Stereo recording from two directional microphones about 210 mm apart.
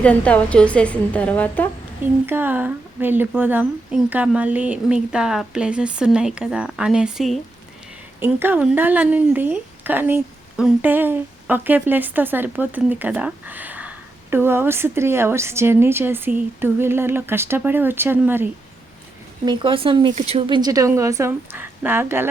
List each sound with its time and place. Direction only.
0.0 s a woman's voice: 5° left (ahead or behind)
2.2 s speech: 10° right (ahead or behind)
19.5 s speech: 25° right (ahead or behind)